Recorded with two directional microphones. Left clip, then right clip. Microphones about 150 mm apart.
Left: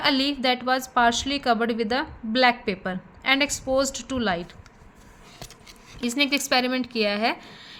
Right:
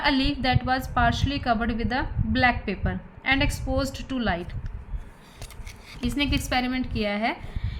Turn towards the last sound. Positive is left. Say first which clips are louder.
# left 3 dB
turn(degrees=50)  # may be behind; listen again after turning